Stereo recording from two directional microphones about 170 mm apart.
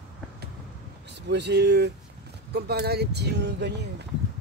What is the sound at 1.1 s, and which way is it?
Speech, 90° right.